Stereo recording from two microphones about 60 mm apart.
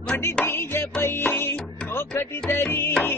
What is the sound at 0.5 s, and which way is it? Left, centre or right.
Music, left.